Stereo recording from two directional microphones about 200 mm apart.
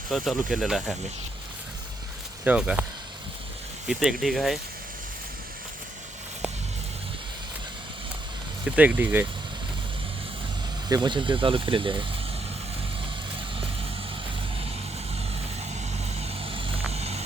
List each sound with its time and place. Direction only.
0.1 s speech: centre (ahead or behind)
2.4 s speech: 5° right (ahead or behind)
3.8 s speech: centre (ahead or behind)
8.6 s speech: 5° right (ahead or behind)
10.8 s speech: 20° right (ahead or behind)
15.7 s vehicle: 30° right (ahead or behind)